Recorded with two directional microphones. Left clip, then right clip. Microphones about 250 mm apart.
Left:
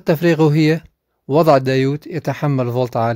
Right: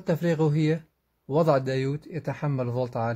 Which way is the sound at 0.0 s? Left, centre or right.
Left.